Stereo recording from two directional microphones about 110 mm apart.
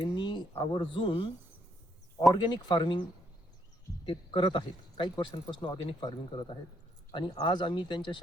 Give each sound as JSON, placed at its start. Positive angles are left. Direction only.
{"t": 0.2, "sound": "speech", "side_deg": 40}
{"t": 2.3, "sound": "a man's voice", "side_deg": 40}
{"t": 4.0, "sound": "a man's voice", "side_deg": 45}